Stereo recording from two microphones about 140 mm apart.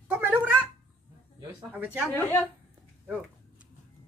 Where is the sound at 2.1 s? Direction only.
15° left (ahead or behind).